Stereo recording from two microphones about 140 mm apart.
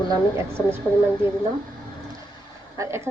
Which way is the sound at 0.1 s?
20° right (ahead or behind).